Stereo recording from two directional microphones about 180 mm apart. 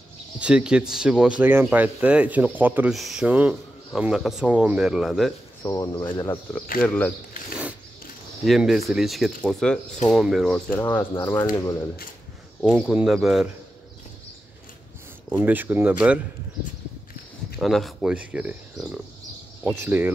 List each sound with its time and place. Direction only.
0.4 s speech: 5° right (ahead or behind)
5.6 s speech: 20° left (ahead or behind)
6.6 s speech: 55° left (ahead or behind)
8.5 s speech: centre (ahead or behind)
10.8 s speech: 15° left (ahead or behind)
12.5 s speech: centre (ahead or behind)
15.2 s speech: 10° right (ahead or behind)
17.6 s speech: centre (ahead or behind)